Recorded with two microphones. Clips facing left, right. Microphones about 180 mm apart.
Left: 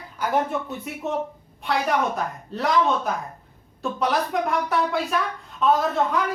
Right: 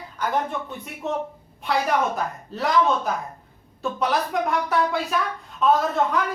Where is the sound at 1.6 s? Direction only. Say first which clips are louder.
Right 1 dB; centre (ahead or behind).